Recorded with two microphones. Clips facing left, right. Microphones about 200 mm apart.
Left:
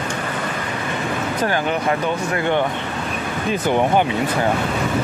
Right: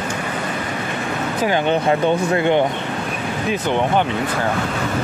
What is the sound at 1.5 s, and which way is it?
Speech, 25° right (ahead or behind).